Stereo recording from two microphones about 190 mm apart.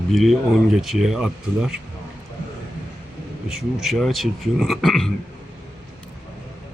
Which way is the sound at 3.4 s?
Centre (ahead or behind).